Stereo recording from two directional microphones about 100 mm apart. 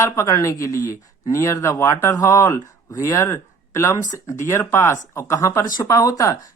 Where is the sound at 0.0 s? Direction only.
35° left (ahead or behind).